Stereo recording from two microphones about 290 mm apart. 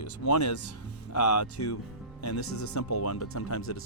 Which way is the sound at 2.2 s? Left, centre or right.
Left.